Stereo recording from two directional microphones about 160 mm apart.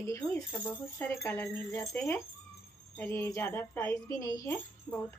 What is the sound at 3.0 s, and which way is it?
Speech, 15° left (ahead or behind).